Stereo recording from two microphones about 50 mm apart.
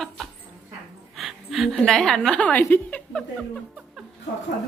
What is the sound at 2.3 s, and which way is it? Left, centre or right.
Speech, left.